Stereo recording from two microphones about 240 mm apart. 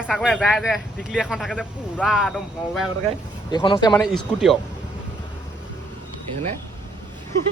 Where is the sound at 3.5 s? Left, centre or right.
Centre.